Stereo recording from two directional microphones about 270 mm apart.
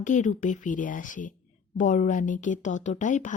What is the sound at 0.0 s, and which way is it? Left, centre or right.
A woman's voice, left.